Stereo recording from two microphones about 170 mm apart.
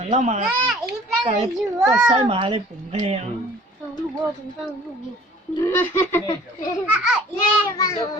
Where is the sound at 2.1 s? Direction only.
35° right (ahead or behind).